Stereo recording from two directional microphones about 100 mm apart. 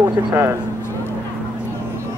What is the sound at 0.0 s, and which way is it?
Speech, 30° right (ahead or behind).